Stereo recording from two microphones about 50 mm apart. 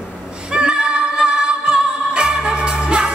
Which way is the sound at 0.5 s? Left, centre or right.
Centre.